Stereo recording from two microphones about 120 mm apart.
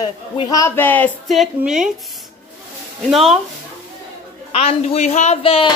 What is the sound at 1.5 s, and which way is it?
Speech, 5° right (ahead or behind).